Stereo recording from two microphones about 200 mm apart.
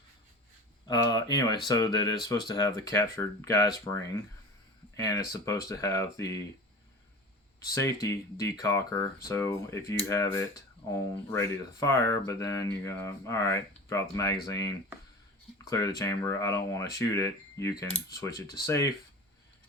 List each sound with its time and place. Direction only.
0.9 s speech: 20° left (ahead or behind)
7.6 s speech: 15° left (ahead or behind)